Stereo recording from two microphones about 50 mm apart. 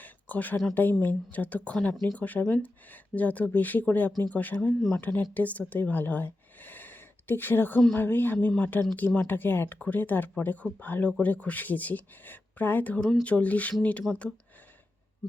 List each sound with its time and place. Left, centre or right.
0.0 s a sound: left
0.7 s speech: left
14.1 s speech: centre